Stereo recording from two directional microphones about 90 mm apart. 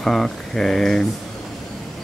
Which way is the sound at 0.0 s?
5° left (ahead or behind).